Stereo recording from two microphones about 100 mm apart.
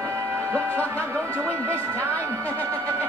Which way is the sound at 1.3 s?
25° right (ahead or behind).